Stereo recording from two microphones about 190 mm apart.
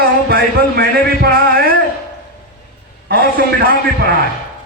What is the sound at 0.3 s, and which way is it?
Music, 55° right (ahead or behind).